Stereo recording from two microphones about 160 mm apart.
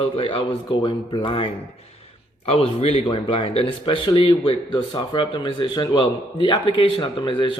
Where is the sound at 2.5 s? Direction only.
40° left (ahead or behind).